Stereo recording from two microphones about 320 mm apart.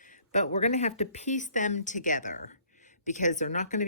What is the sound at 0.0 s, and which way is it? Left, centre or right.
Speech, left.